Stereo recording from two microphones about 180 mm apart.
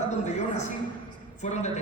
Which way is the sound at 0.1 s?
40° left (ahead or behind).